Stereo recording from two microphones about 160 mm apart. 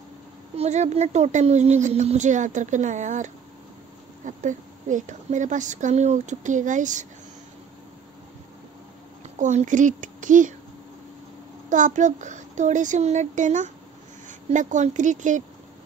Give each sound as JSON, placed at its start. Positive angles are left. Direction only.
{"t": 0.6, "sound": "speech", "side_deg": -45}
{"t": 9.4, "sound": "speech", "side_deg": -50}
{"t": 11.7, "sound": "speech", "side_deg": -50}